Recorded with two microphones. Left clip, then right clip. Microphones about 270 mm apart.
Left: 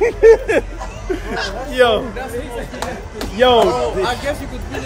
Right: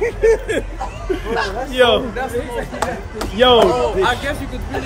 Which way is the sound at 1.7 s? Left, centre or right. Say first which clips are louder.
Even; centre.